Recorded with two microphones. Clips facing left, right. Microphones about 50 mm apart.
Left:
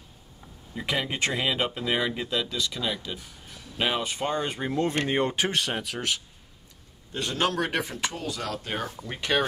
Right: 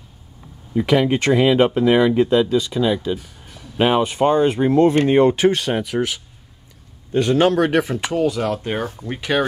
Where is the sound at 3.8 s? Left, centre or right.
Right.